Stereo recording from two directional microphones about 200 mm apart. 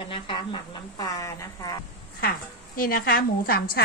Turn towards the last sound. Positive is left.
turn(degrees=50)  # may be behind; listen again after turning